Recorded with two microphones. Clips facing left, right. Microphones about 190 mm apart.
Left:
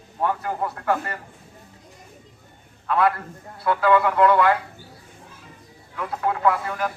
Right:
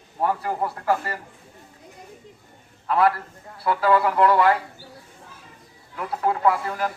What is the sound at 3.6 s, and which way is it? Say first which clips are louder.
Speech: left 1 dB; 5° right (ahead or behind).